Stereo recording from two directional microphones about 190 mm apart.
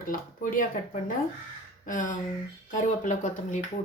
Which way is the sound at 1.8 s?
45° left (ahead or behind).